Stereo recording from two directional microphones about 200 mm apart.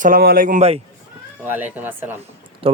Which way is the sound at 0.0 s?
50° right (ahead or behind).